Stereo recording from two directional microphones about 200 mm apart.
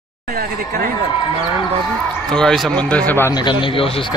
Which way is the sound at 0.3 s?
50° right (ahead or behind).